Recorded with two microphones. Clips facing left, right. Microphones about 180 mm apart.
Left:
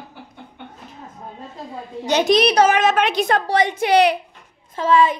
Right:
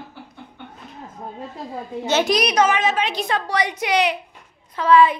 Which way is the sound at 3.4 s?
25° left (ahead or behind).